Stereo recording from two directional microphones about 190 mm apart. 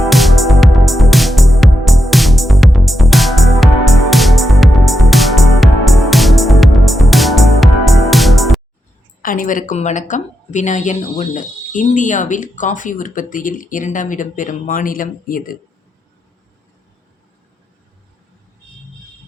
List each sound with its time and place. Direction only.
0.0 s music: centre (ahead or behind)
9.2 s a woman's voice: 45° left (ahead or behind)